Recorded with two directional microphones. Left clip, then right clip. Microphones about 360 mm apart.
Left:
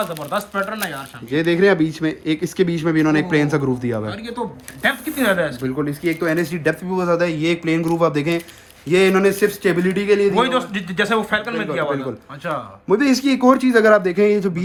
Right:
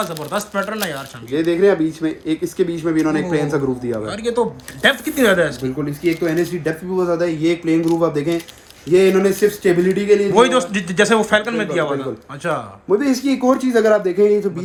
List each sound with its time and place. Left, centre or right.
0.1 s speech: centre
1.3 s speech: left
4.1 s speech: centre
6.9 s speech: left
7.2 s a man's voice: centre
8.9 s a man's voice: centre
10.3 s speech: centre
12.9 s a man's voice: centre